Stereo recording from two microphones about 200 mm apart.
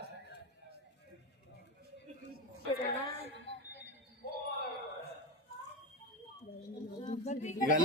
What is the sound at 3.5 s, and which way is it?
Music, 25° left (ahead or behind).